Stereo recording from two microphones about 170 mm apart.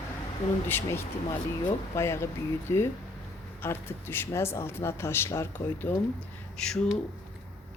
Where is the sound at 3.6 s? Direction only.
15° left (ahead or behind).